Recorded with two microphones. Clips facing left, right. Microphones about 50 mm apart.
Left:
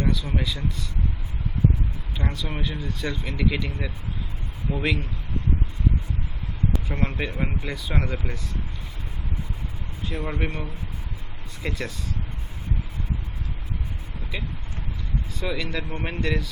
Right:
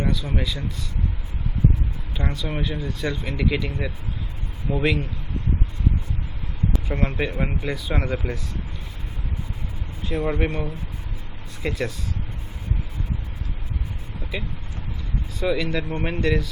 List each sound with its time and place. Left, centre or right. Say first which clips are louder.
0.0 s speech: right 1 dB; centre
2.1 s speech: right 3 dB; centre
4.7 s speech: right 3 dB; centre
6.7 s speech: right 5 dB; centre
10.1 s speech: right 6 dB; centre
15.4 s speech: right 6 dB; centre